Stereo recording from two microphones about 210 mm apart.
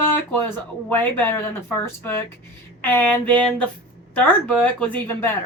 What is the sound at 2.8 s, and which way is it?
A woman's voice, 10° left (ahead or behind).